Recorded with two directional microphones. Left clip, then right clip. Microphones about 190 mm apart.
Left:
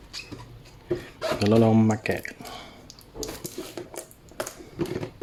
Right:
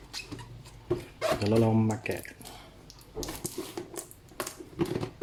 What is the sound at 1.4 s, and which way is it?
Speech, 25° left (ahead or behind).